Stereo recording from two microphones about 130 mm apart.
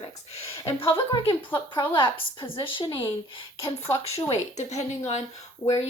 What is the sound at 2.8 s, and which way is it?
Speech, 25° left (ahead or behind).